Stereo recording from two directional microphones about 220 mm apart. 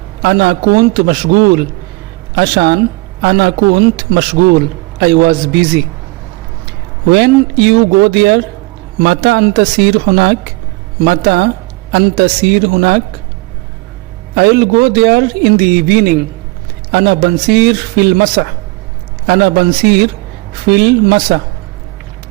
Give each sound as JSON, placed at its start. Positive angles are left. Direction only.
{"t": 0.2, "sound": "a man's voice", "side_deg": -50}
{"t": 7.1, "sound": "a man's voice", "side_deg": -45}
{"t": 14.3, "sound": "a man's voice", "side_deg": -45}